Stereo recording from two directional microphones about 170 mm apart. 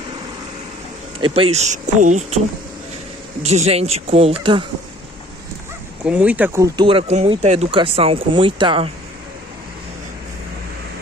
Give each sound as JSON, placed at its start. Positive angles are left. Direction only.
{"t": 1.2, "sound": "speech", "side_deg": -35}
{"t": 3.4, "sound": "speech", "side_deg": -40}
{"t": 6.0, "sound": "speech", "side_deg": -5}
{"t": 6.9, "sound": "speech", "side_deg": -35}